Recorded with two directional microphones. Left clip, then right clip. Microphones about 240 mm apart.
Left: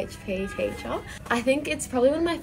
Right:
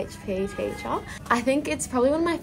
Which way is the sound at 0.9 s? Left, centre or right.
Centre.